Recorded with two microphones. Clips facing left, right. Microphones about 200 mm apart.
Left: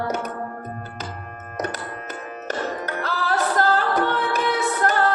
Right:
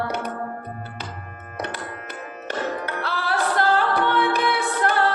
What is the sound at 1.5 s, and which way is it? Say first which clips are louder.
Music: left 3 dB; 40° left (ahead or behind).